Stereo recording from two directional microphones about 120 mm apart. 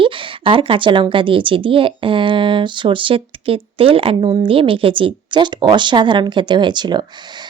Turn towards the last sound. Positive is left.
turn(degrees=-40)  # may be behind; listen again after turning